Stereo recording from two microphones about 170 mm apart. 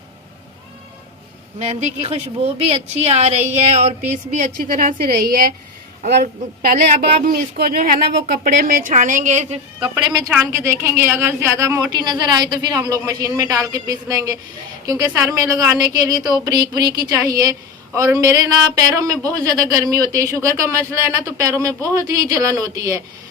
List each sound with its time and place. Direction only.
1.5 s a woman's voice: 40° right (ahead or behind)
9.9 s a woman's voice: 20° right (ahead or behind)